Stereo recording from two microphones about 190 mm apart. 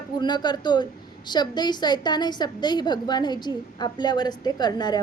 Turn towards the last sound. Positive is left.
turn(degrees=20)  # may be behind; listen again after turning